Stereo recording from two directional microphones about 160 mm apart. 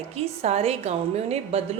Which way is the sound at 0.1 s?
40° right (ahead or behind).